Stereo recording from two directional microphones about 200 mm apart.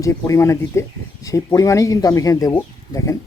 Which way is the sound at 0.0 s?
15° left (ahead or behind).